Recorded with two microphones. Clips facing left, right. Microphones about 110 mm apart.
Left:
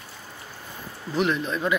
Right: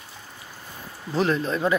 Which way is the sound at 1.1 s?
35° right (ahead or behind).